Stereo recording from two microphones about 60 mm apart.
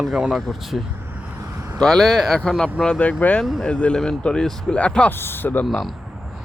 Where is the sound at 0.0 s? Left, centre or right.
Centre.